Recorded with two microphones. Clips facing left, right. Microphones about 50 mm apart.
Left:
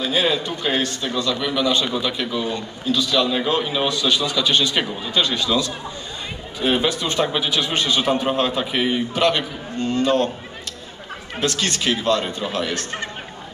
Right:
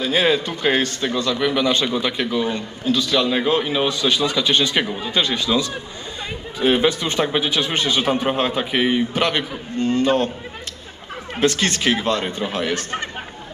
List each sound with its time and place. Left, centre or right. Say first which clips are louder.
0.0 s a man's voice: right 2 dB; right
3.2 s a man's voice: right 1 dB; right
11.3 s a man's voice: right 4 dB; right